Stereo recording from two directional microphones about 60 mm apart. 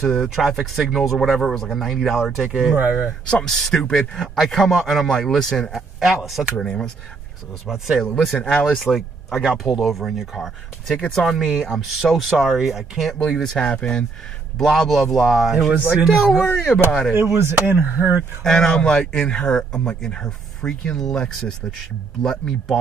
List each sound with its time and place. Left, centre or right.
0.0 s speech: centre
2.7 s speech: right
3.3 s speech: centre
5.7 s speech: centre
7.6 s speech: centre
13.3 s speech: centre
16.3 s speech: centre
17.1 s speech: right
18.4 s speech: centre